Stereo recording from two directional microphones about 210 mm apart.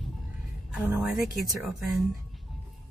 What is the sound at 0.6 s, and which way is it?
A woman's voice, 5° right (ahead or behind).